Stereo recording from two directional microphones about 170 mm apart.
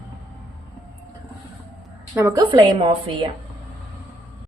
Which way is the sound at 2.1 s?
20° right (ahead or behind).